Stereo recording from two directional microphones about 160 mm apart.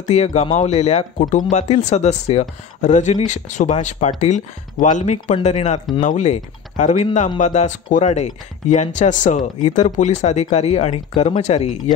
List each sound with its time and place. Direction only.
0.1 s speech: 45° left (ahead or behind)